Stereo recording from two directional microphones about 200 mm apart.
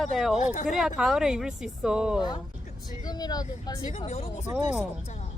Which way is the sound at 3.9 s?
35° left (ahead or behind).